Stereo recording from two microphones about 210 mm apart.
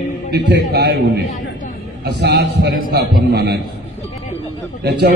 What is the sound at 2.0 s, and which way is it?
A man's voice, 50° right (ahead or behind).